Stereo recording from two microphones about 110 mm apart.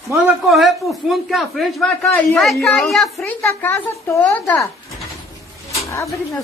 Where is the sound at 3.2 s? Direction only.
15° left (ahead or behind).